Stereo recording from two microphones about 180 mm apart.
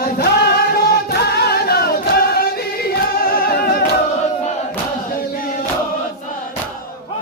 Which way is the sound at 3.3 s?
55° left (ahead or behind).